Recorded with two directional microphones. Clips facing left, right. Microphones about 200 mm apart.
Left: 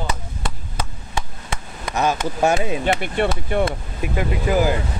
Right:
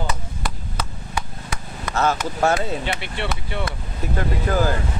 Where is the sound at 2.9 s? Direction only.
50° left (ahead or behind).